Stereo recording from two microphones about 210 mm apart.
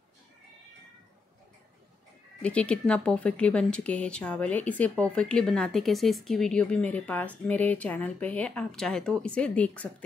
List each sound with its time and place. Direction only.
2.4 s speech: 5° left (ahead or behind)